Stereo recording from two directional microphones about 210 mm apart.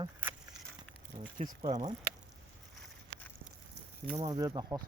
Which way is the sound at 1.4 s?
35° right (ahead or behind).